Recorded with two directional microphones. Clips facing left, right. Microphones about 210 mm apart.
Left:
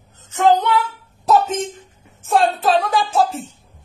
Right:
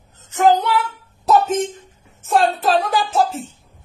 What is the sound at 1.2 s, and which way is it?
Speech, centre (ahead or behind).